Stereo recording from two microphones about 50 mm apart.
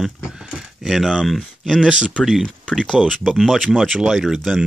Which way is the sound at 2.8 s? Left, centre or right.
Centre.